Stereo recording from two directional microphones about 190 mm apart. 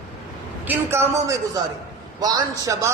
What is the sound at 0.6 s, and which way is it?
A man's voice, 15° right (ahead or behind).